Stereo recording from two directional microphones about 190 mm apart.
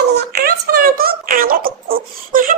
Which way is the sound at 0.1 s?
55° right (ahead or behind).